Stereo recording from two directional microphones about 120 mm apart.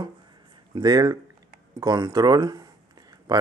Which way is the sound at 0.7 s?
30° right (ahead or behind).